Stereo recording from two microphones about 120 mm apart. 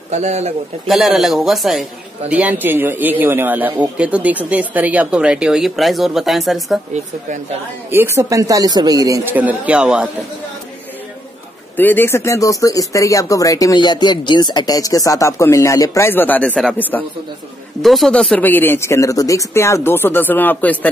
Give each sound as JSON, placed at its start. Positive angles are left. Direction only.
{"t": 0.1, "sound": "a man's voice", "side_deg": -70}
{"t": 0.8, "sound": "a man's voice", "side_deg": 0}
{"t": 7.9, "sound": "speech", "side_deg": -20}
{"t": 9.2, "sound": "a man's voice", "side_deg": -15}
{"t": 11.7, "sound": "speech", "side_deg": 15}
{"t": 17.8, "sound": "speech", "side_deg": 0}